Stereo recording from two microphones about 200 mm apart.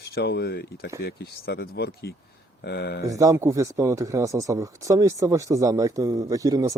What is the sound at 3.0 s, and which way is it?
Speech, 15° right (ahead or behind).